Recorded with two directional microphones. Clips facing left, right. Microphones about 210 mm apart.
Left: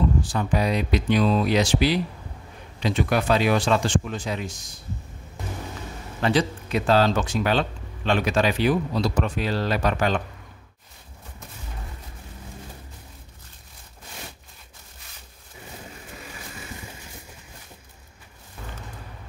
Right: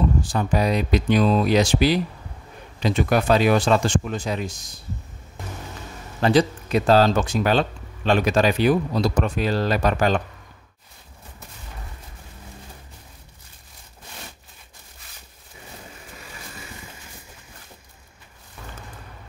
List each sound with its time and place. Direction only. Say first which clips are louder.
0.3 s speech: right 2 dB; 40° right (ahead or behind)
6.2 s speech: right 4 dB; 40° right (ahead or behind)